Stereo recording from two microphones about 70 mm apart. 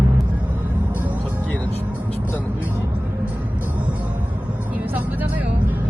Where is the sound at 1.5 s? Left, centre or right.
Left.